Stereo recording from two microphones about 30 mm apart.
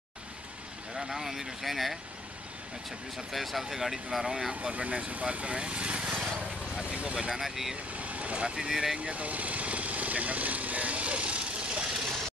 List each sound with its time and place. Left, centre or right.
0.9 s speech: centre
3.3 s speech: centre
4.7 s speech: right
6.1 s a sound: right
6.7 s vehicle: right
7.2 s speech: right
7.4 s speech: centre
7.9 s vehicle: right
8.5 s speech: right
9.1 s vehicle: right